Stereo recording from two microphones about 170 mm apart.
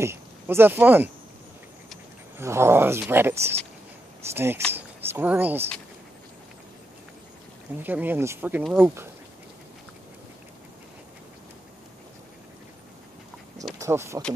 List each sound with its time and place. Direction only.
0.0 s speech: 15° right (ahead or behind)
2.3 s speech: 15° right (ahead or behind)
7.8 s speech: 10° right (ahead or behind)
13.7 s speech: 15° right (ahead or behind)